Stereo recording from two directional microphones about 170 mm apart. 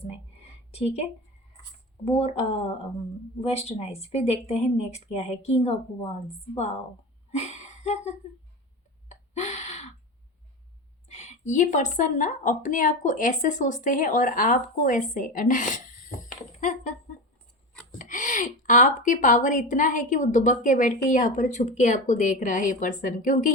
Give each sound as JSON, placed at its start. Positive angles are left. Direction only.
{"t": 2.0, "sound": "speech", "side_deg": 35}
{"t": 7.3, "sound": "a sound", "side_deg": 40}
{"t": 11.1, "sound": "speech", "side_deg": 40}
{"t": 17.9, "sound": "a woman's voice", "side_deg": 50}